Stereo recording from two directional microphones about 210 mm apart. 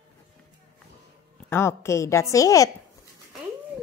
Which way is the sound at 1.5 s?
10° left (ahead or behind).